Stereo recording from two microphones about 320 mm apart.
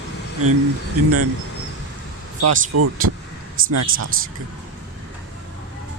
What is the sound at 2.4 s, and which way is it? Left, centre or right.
Speech, right.